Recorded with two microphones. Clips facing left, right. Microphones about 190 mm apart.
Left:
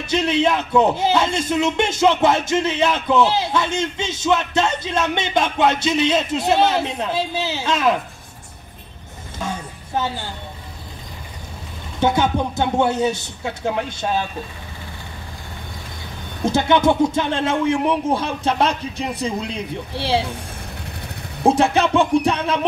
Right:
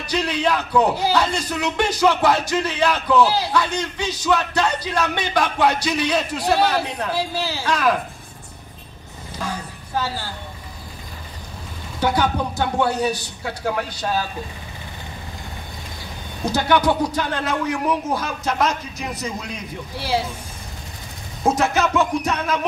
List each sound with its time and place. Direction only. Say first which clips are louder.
0.0 s speech: left 4 dB; 25° left (ahead or behind)
9.4 s a sound: left 1 dB; 25° left (ahead or behind)
12.0 s speech: left 2 dB; 25° left (ahead or behind)
16.4 s speech: left 2 dB; 25° left (ahead or behind)
21.5 s speech: left 3 dB; 30° left (ahead or behind)